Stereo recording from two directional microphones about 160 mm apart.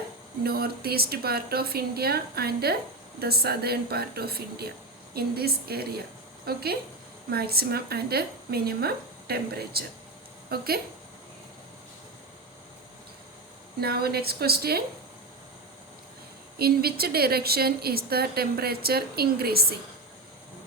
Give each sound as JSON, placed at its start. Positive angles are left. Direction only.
{"t": 0.4, "sound": "a woman's voice", "side_deg": -75}
{"t": 13.8, "sound": "a woman's voice", "side_deg": -80}
{"t": 16.6, "sound": "a woman's voice", "side_deg": -75}